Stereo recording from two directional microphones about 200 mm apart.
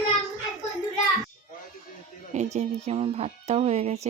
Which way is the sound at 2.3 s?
35° right (ahead or behind).